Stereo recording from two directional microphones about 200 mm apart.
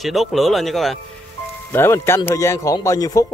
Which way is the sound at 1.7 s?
10° left (ahead or behind).